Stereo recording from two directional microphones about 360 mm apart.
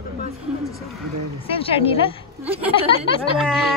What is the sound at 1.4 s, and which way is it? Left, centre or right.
A woman's voice, centre.